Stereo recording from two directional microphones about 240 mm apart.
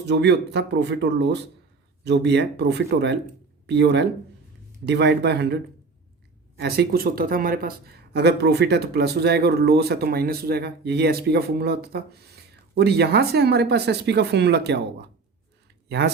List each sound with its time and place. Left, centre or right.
0.0 s speech: right
6.6 s speech: right
15.9 s speech: right